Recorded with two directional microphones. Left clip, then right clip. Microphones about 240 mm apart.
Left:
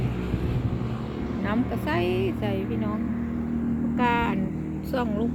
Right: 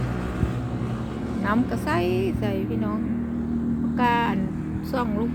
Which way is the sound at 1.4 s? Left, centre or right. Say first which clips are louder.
Right 4 dB; centre.